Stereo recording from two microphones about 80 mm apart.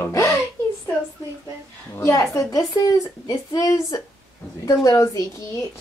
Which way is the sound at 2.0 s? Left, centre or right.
Left.